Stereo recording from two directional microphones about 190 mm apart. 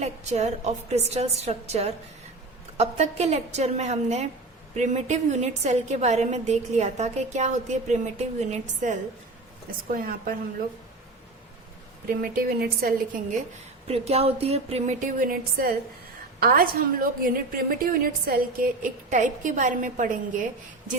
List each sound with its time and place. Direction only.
0.0 s a woman's voice: 35° right (ahead or behind)
9.9 s a woman's voice: 50° right (ahead or behind)
12.2 s a woman's voice: 50° right (ahead or behind)
13.8 s a woman's voice: 35° right (ahead or behind)